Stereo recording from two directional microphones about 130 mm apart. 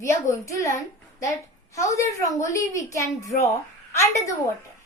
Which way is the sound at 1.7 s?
25° left (ahead or behind).